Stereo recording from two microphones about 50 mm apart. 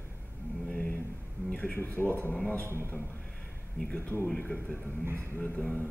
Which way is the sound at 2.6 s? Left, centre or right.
Right.